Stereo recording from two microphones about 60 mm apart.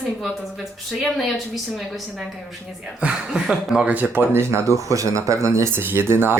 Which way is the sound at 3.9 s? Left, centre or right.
Right.